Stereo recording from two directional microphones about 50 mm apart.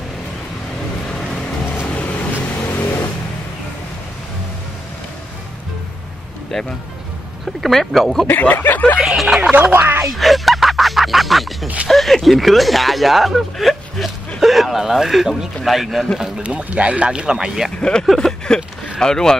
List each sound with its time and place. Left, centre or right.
1.9 s vehicle: left
2.5 s vehicle: left
6.5 s speech: centre
8.3 s speech: left
9.0 s speech: centre
9.4 s speech: right
9.7 s speech: right
10.1 s music: centre
11.9 s speech: centre
16.2 s speech: centre
17.7 s speech: centre
18.0 s a sound: centre
18.9 s speech: centre